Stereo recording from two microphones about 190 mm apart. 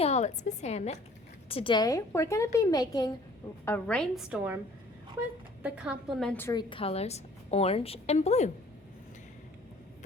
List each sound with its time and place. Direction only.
0.0 s a woman's voice: 35° left (ahead or behind); by 3.1 s 20° left (ahead or behind)
3.7 s a woman's voice: 5° left (ahead or behind)
5.6 s a woman's voice: 5° right (ahead or behind); by 6.6 s 10° left (ahead or behind)
6.6 s a woman's voice: 25° left (ahead or behind)